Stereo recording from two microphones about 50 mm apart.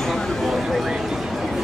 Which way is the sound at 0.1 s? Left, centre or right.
Centre.